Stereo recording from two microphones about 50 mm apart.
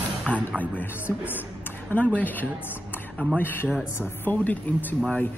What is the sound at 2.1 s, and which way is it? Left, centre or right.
Speech, left.